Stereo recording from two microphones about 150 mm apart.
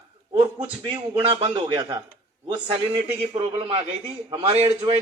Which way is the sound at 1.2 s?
40° right (ahead or behind).